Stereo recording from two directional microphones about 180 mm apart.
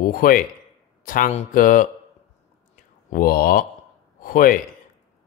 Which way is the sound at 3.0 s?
55° left (ahead or behind).